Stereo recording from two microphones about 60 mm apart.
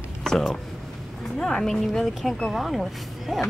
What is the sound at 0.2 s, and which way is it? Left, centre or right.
Speech, centre.